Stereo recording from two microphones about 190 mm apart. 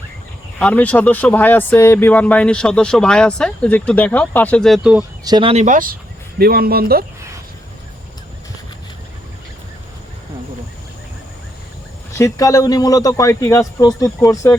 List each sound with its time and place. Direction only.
0.6 s speech: 10° left (ahead or behind)
5.2 s speech: 25° right (ahead or behind); by 7.0 s 55° right (ahead or behind)
12.1 s speech: 15° left (ahead or behind)